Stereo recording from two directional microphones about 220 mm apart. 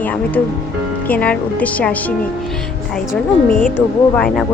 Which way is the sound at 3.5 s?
35° left (ahead or behind).